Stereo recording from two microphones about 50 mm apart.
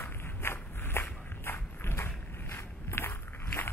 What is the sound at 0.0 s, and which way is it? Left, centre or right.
Walk, left.